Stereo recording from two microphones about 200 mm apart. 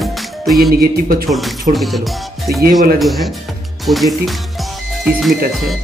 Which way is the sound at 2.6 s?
50° right (ahead or behind).